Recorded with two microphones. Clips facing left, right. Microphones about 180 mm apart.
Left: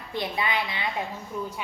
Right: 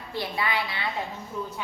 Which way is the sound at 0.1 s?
20° left (ahead or behind).